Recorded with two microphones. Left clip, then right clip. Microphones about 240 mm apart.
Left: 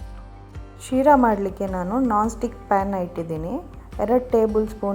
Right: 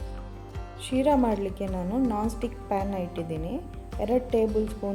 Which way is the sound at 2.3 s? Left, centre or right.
Left.